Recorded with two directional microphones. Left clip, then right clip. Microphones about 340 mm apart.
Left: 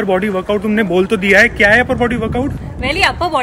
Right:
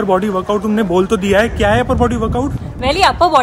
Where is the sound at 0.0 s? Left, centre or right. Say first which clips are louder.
Right 1 dB; centre.